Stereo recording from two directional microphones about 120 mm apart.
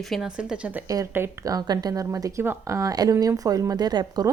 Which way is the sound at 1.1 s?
20° right (ahead or behind).